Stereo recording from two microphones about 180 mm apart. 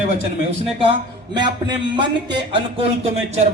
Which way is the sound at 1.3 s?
25° right (ahead or behind).